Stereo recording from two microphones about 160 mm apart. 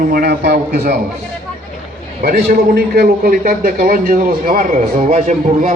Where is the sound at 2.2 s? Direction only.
70° right (ahead or behind).